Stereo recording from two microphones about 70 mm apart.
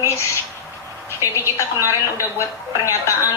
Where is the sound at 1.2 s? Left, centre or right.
Left.